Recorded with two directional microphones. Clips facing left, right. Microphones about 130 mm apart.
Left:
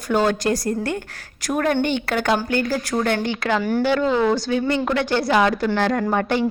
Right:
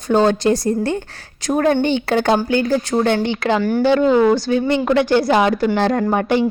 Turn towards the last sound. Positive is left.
turn(degrees=-15)  # may be behind; listen again after turning